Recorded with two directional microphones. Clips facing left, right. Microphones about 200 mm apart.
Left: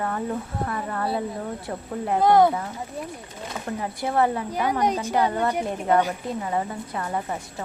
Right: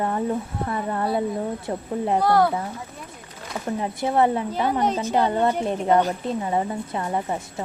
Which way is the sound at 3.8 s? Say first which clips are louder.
Right 2 dB; 20° right (ahead or behind).